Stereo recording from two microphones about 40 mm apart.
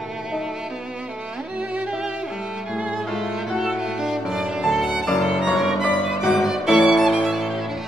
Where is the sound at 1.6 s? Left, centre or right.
Right.